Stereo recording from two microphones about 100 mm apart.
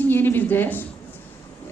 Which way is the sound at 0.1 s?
20° left (ahead or behind).